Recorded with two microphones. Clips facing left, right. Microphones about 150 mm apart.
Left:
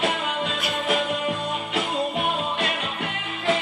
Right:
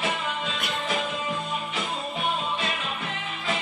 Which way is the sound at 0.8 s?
65° left (ahead or behind).